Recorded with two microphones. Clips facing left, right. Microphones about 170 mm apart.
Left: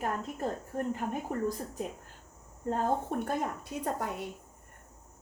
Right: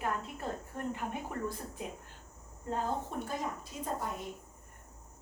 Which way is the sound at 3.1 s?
60° left (ahead or behind).